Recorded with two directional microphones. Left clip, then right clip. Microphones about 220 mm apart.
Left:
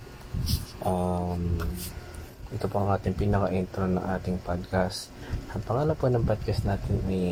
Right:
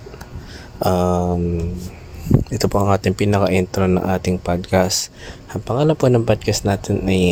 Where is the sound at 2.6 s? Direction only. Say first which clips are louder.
Right 9 dB; 50° right (ahead or behind).